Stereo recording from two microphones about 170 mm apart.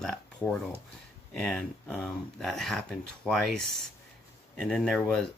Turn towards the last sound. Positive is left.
turn(degrees=0)  # may be behind; listen again after turning